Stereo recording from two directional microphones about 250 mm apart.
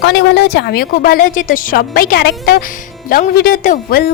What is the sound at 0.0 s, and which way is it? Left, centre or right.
Speech, left.